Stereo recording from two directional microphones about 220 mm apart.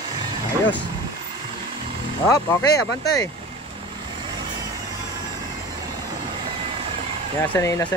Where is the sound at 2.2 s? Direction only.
15° left (ahead or behind).